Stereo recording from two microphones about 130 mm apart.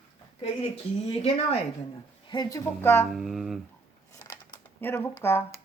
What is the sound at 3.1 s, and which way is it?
Speech, centre (ahead or behind).